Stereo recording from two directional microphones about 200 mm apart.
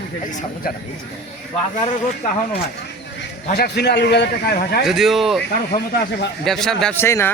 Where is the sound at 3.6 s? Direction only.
55° left (ahead or behind).